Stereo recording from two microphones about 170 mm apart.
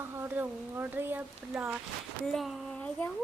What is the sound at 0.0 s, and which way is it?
Speech, 10° right (ahead or behind).